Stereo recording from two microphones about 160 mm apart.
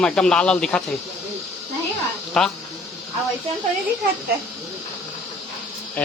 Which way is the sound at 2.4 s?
5° left (ahead or behind).